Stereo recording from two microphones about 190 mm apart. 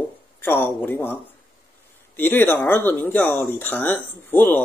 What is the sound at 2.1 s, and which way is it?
Speech, 10° left (ahead or behind).